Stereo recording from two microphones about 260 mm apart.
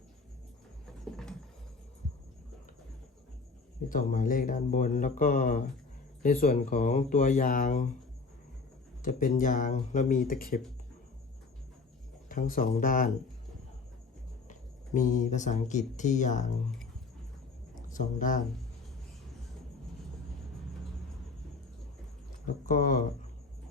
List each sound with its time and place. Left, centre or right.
1.1 s patter: centre
3.8 s speech: left
9.0 s speech: left
12.3 s speech: left
14.4 s speech: left
17.8 s speech: left
22.4 s speech: left